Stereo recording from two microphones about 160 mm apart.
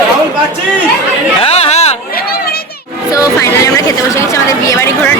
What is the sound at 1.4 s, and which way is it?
Chatter, 40° left (ahead or behind).